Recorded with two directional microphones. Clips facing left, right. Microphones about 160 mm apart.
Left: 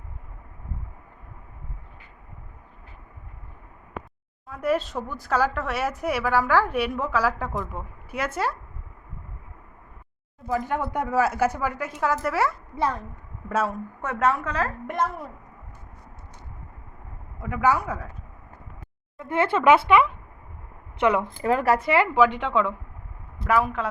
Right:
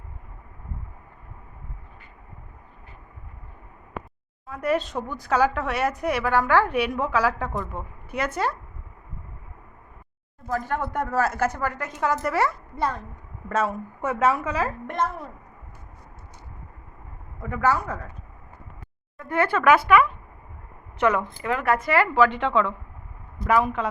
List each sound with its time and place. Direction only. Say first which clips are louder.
4.4 s speech: even; centre (ahead or behind)
10.5 s a woman's voice: left 1 dB; 10° left (ahead or behind)
13.7 s a woman's voice: right 3 dB; 5° right (ahead or behind)
14.8 s a woman's voice: even; 5° left (ahead or behind)
17.4 s a woman's voice: left 1 dB; 10° left (ahead or behind)
19.2 s a woman's voice: left 1 dB; 25° left (ahead or behind)
21.2 s a woman's voice: left 4 dB; 35° left (ahead or behind); by 23.9 s centre (ahead or behind)